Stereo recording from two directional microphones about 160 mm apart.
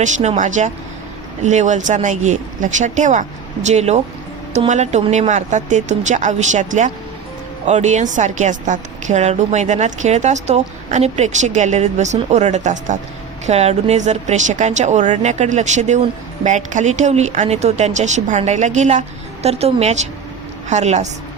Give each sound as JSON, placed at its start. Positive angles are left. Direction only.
{"t": 0.0, "sound": "a woman's voice", "side_deg": -45}